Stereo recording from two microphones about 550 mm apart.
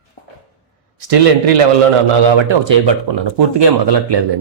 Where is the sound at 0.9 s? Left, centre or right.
Right.